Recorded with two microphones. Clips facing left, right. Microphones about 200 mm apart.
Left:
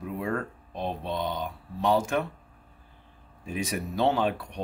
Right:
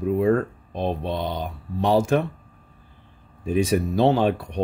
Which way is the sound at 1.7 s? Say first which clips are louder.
Right 5 dB; 30° right (ahead or behind).